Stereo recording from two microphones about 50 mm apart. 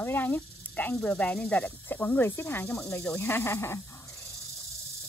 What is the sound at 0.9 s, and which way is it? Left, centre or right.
Speech, left.